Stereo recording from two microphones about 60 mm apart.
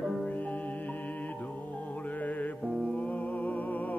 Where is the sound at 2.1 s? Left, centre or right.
Left.